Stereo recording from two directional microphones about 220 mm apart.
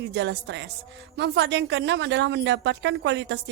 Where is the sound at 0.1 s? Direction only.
55° right (ahead or behind).